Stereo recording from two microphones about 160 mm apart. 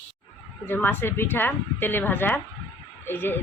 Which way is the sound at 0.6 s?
10° left (ahead or behind).